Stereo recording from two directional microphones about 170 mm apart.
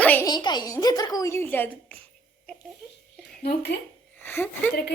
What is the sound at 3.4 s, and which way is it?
Speech, 70° left (ahead or behind).